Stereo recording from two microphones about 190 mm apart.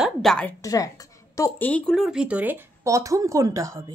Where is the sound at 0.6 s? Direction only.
15° left (ahead or behind); by 3.8 s 15° right (ahead or behind).